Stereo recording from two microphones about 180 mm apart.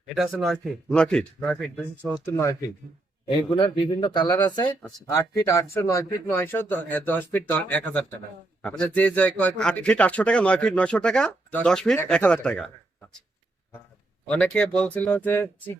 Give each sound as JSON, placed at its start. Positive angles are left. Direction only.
{"t": 0.2, "sound": "a man's voice", "side_deg": 0}
{"t": 2.2, "sound": "speech", "side_deg": 15}
{"t": 3.2, "sound": "a man's voice", "side_deg": 25}
{"t": 14.3, "sound": "speech", "side_deg": 5}